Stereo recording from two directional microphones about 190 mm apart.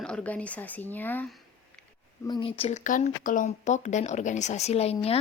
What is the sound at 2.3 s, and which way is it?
Speech, 30° left (ahead or behind).